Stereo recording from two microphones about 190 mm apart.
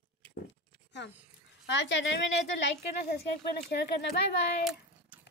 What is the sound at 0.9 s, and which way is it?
A child's voice, 65° left (ahead or behind).